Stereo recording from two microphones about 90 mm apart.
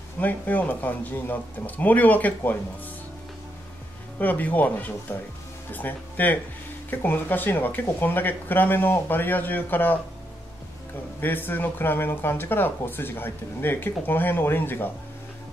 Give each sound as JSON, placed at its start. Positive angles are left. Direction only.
{"t": 0.2, "sound": "speech", "side_deg": 20}
{"t": 4.2, "sound": "speech", "side_deg": 20}
{"t": 11.1, "sound": "speech", "side_deg": 20}